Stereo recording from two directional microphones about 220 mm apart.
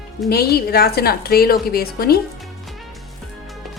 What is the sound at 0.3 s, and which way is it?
A woman's voice, 45° left (ahead or behind).